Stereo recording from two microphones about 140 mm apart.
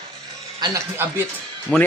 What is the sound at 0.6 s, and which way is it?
Speech, 30° right (ahead or behind).